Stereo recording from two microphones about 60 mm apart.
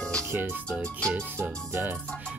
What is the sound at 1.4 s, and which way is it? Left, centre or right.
Speech, right.